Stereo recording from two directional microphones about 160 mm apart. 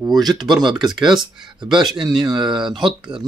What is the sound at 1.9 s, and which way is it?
Speech, 5° right (ahead or behind).